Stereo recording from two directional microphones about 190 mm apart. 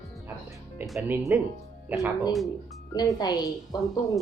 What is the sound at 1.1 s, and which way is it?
Speech, 10° right (ahead or behind).